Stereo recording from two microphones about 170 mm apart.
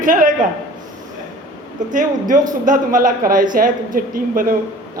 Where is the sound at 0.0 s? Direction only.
55° right (ahead or behind).